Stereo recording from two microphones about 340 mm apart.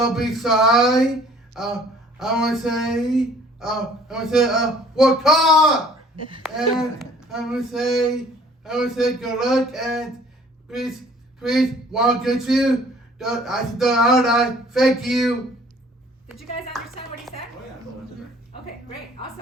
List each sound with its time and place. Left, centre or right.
0.0 s speech: centre